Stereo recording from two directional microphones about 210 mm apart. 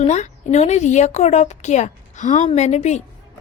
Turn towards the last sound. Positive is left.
turn(degrees=30)  # may be behind; listen again after turning